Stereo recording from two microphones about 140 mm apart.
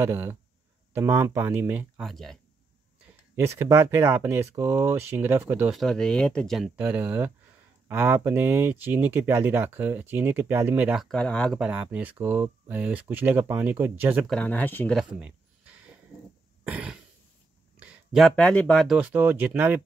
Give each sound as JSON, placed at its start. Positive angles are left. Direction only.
{"t": 0.0, "sound": "speech", "side_deg": -15}
{"t": 2.0, "sound": "speech", "side_deg": 5}
{"t": 3.3, "sound": "speech", "side_deg": -20}
{"t": 5.7, "sound": "speech", "side_deg": 0}
{"t": 6.8, "sound": "speech", "side_deg": -15}
{"t": 11.0, "sound": "speech", "side_deg": 5}
{"t": 11.6, "sound": "speech", "side_deg": -10}
{"t": 14.2, "sound": "speech", "side_deg": 5}
{"t": 15.0, "sound": "a sound", "side_deg": -10}
{"t": 16.6, "sound": "cough", "side_deg": -10}
{"t": 17.7, "sound": "a sound", "side_deg": -5}
{"t": 18.3, "sound": "speech", "side_deg": 10}
{"t": 18.9, "sound": "speech", "side_deg": -10}